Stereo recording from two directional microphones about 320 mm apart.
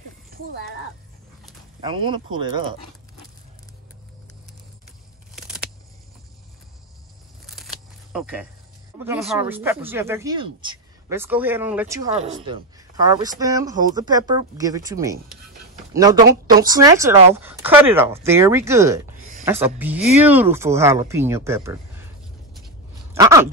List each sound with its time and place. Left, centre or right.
0.3 s speech: right
1.8 s a man's voice: centre
7.4 s a sound: centre
9.3 s a man's voice: centre
23.1 s a man's voice: centre